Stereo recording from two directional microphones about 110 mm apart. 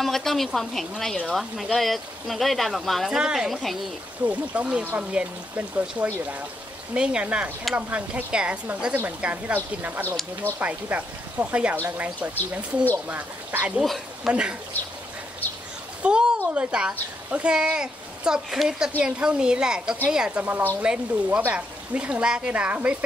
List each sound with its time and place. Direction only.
0.0 s speech: 5° left (ahead or behind)
4.3 s speech: 10° right (ahead or behind)
13.7 s speech: centre (ahead or behind)
16.0 s speech: 10° right (ahead or behind)